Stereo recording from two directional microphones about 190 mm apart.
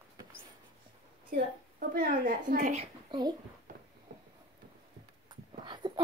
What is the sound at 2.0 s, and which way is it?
A child's voice, 45° right (ahead or behind).